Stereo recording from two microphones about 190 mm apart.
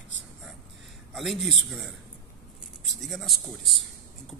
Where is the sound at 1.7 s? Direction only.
Centre (ahead or behind).